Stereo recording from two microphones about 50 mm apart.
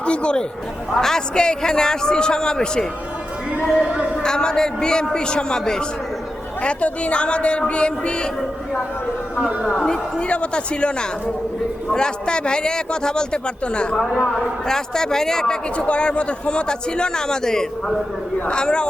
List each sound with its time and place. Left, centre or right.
0.0 s speech: left
0.9 s a man's voice: centre
3.7 s speech: centre
3.9 s a sound: right
4.2 s a man's voice: centre
9.8 s a man's voice: centre